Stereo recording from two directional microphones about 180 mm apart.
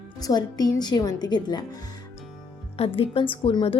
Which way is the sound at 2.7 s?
30° left (ahead or behind).